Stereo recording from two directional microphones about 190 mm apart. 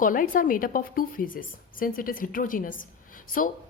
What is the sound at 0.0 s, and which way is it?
A woman's voice, 45° left (ahead or behind).